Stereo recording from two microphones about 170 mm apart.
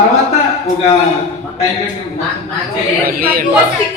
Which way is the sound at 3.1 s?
60° right (ahead or behind).